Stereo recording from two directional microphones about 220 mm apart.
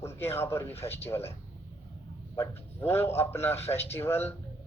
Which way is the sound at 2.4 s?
10° left (ahead or behind).